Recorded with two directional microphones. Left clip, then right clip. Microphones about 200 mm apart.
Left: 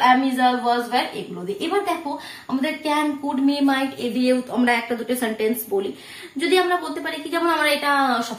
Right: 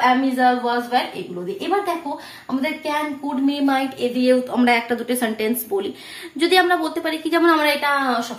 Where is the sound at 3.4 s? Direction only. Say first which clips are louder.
Right 1 dB; 35° right (ahead or behind).